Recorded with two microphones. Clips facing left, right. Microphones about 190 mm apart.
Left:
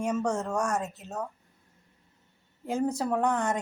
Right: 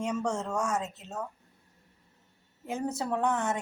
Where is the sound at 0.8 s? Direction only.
10° left (ahead or behind).